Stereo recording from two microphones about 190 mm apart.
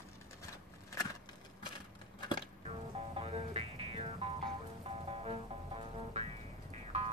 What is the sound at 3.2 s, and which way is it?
Music, 30° right (ahead or behind).